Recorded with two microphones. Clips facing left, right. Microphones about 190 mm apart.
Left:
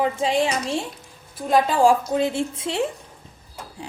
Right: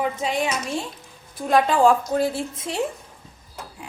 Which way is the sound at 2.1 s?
25° left (ahead or behind).